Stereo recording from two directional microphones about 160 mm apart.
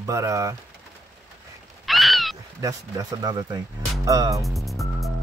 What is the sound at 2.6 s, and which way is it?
Speech, 25° right (ahead or behind).